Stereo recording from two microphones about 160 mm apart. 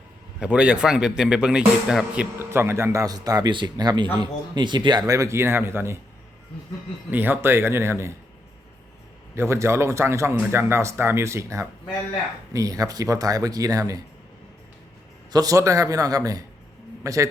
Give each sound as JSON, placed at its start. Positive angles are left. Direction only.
{"t": 0.3, "sound": "a man's voice", "side_deg": -5}
{"t": 7.1, "sound": "speech", "side_deg": -10}
{"t": 9.3, "sound": "a man's voice", "side_deg": -15}
{"t": 15.3, "sound": "a man's voice", "side_deg": -25}